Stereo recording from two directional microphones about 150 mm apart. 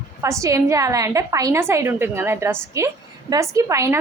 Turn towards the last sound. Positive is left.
turn(degrees=-20)  # may be behind; listen again after turning